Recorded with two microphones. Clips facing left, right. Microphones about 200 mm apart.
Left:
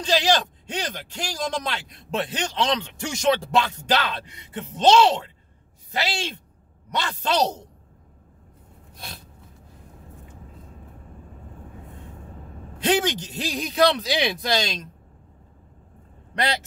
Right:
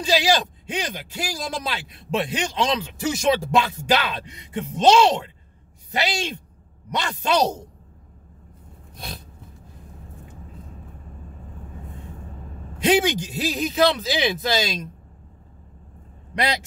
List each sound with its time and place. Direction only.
0.0 s speech: 10° right (ahead or behind)
12.8 s speech: 10° right (ahead or behind)